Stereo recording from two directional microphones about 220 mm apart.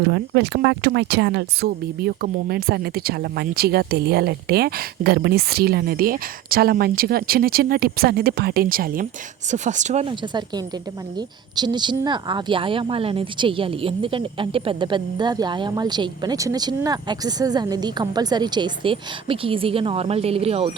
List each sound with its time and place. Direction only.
0.0 s a woman's voice: 50° right (ahead or behind); by 20.7 s 25° right (ahead or behind)